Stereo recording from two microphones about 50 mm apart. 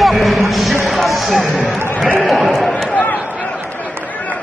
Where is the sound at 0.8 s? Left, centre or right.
Centre.